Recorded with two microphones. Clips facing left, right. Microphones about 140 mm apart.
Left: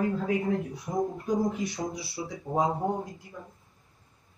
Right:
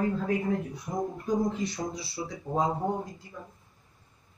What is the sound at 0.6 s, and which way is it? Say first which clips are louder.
Speech: left 2 dB; centre (ahead or behind).